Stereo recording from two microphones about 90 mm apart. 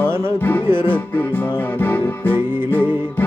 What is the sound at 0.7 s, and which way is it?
Music, 25° right (ahead or behind).